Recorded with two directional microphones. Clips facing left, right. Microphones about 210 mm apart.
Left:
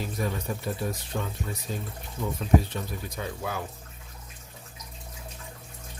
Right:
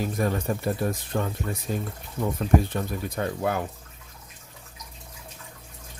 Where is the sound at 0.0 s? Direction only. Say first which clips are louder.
Right 5 dB; 50° right (ahead or behind).